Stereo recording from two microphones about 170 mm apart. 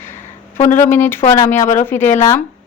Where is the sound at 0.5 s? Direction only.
45° left (ahead or behind).